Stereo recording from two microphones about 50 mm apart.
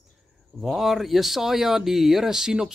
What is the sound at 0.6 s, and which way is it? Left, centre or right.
Speech, centre.